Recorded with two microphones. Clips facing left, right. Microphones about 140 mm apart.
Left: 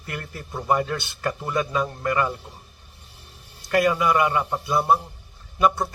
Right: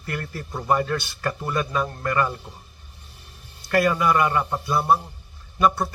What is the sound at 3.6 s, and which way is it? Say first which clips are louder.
A man's voice: even; 20° left (ahead or behind).